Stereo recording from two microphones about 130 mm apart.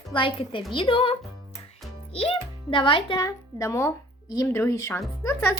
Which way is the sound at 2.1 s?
45° left (ahead or behind).